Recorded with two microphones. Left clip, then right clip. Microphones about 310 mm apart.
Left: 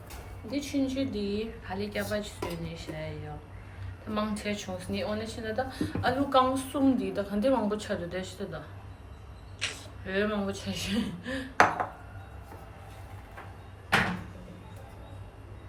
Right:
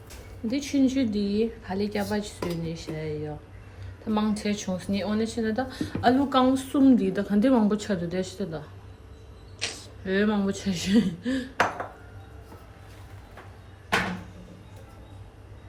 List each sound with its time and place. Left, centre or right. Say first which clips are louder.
0.4 s speech: right 6 dB; right